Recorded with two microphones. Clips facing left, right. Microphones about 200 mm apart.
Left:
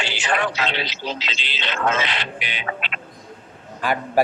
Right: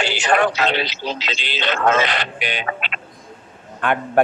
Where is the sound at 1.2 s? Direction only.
60° right (ahead or behind).